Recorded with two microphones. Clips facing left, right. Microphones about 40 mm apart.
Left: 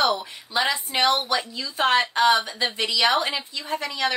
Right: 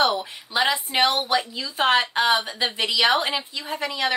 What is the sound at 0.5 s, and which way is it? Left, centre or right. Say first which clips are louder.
A woman's voice: right 1 dB; centre.